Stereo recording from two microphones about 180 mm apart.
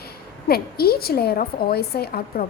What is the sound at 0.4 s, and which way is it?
A woman's voice, 60° left (ahead or behind).